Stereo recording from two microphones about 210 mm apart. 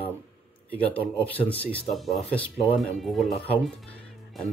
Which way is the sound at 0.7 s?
5° left (ahead or behind).